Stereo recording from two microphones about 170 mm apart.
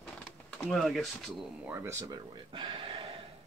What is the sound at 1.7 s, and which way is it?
Speech, 15° right (ahead or behind).